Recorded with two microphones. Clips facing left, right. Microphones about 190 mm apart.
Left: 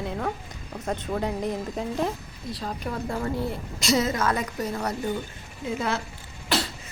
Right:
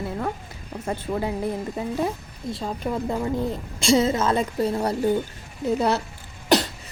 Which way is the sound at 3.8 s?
30° right (ahead or behind).